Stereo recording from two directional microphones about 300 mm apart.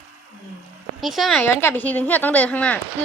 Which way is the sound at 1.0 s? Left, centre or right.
Centre.